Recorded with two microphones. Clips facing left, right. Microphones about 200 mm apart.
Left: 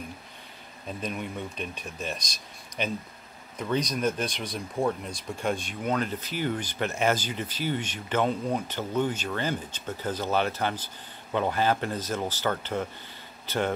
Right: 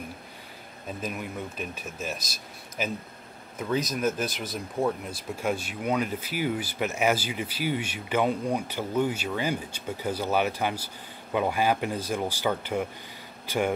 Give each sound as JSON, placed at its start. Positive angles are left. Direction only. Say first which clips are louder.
{"t": 0.8, "sound": "speech", "louder": "even", "side_deg": -5}